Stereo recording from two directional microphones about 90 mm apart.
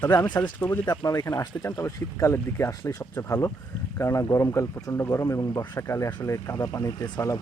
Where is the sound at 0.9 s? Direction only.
45° left (ahead or behind).